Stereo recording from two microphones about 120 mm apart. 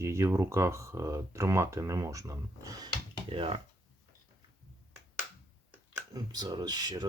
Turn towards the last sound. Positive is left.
turn(degrees=-35)  # may be behind; listen again after turning